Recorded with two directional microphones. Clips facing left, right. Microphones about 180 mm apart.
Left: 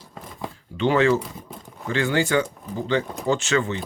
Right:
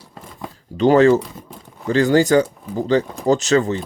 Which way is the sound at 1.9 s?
40° right (ahead or behind).